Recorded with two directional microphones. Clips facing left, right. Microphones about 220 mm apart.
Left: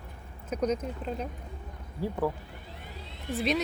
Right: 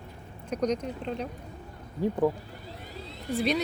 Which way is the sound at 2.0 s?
20° right (ahead or behind).